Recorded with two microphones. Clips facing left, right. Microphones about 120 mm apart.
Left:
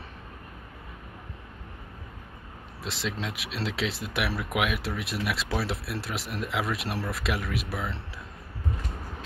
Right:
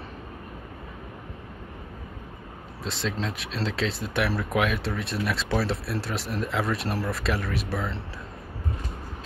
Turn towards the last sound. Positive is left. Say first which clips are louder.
# right 3 dB
turn(degrees=5)  # may be behind; listen again after turning